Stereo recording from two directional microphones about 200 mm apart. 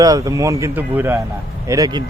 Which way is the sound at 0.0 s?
15° right (ahead or behind).